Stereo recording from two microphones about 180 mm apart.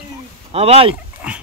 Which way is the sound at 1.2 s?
5° right (ahead or behind).